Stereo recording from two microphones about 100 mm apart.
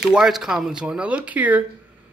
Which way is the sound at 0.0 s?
5° right (ahead or behind).